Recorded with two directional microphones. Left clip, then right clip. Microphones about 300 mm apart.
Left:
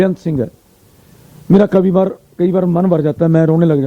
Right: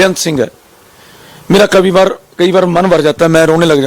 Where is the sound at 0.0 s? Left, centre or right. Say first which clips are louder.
Right 6 dB; centre.